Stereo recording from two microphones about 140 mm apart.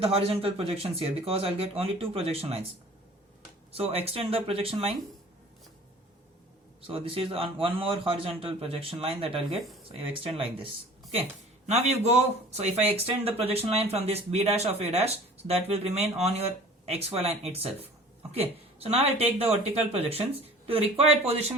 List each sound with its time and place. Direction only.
0.0 s speech: 45° right (ahead or behind)
3.7 s speech: 45° right (ahead or behind)
6.8 s a man's voice: 40° right (ahead or behind)
11.7 s speech: 50° right (ahead or behind)